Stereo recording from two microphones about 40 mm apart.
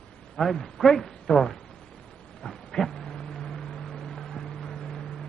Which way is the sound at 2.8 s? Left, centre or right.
Centre.